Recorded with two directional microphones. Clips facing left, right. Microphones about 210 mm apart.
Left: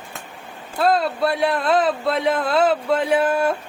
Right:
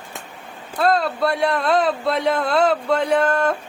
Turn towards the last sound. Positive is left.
turn(degrees=10)  # may be behind; listen again after turning